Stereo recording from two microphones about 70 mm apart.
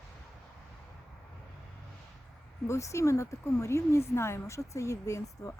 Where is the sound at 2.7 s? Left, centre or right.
Left.